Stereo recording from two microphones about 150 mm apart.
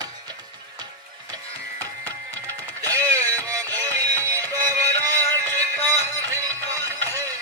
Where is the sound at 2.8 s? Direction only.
20° right (ahead or behind).